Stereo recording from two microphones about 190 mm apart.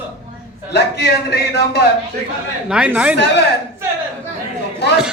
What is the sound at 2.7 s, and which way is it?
Speech, 5° right (ahead or behind).